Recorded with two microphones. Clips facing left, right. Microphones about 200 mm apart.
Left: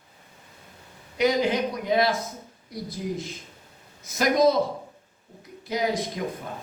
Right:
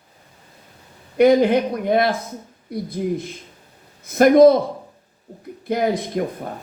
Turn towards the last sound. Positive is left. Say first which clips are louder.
# right 6 dB
turn(degrees=-55)  # may be behind; listen again after turning